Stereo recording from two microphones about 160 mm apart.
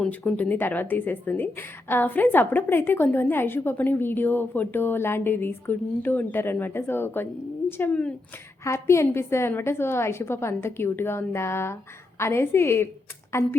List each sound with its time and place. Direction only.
0.0 s a woman's voice: 10° left (ahead or behind)